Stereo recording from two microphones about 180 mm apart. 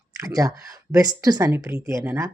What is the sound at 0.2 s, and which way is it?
Speech, 20° right (ahead or behind).